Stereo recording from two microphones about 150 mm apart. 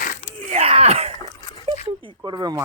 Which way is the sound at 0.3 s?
45° right (ahead or behind).